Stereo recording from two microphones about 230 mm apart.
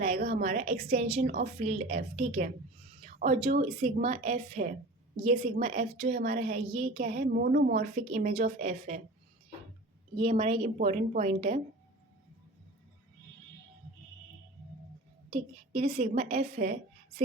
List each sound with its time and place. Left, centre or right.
0.2 s a woman's voice: right
0.4 s a woman's voice: right
6.1 s a woman's voice: right
6.7 s a woman's voice: right
7.0 s a woman's voice: right
7.9 s a woman's voice: right
10.2 s a woman's voice: right
15.3 s speech: right
15.8 s a woman's voice: right